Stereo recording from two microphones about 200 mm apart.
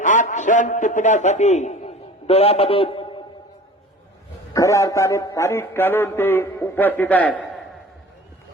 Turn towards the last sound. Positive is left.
turn(degrees=5)  # may be behind; listen again after turning